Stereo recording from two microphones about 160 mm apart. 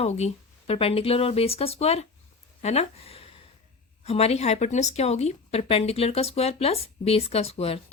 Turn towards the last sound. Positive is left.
turn(degrees=40)  # may be behind; listen again after turning